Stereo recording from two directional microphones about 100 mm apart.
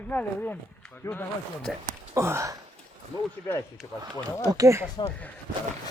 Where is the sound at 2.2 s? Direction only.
25° right (ahead or behind).